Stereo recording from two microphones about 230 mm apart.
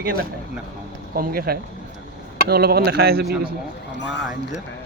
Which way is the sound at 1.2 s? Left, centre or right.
Right.